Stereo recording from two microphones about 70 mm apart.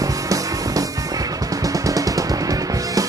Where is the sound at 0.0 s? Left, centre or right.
Right.